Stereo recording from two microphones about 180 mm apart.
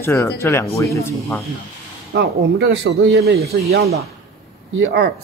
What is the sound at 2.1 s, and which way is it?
Speech, 70° right (ahead or behind).